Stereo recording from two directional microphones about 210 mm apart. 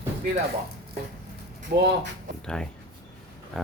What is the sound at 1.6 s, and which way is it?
Speech, 50° right (ahead or behind).